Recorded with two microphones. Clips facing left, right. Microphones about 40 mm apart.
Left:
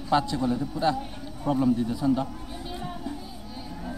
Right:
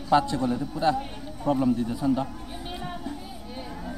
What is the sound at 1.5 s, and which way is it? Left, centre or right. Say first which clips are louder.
Speech: right 1 dB; left.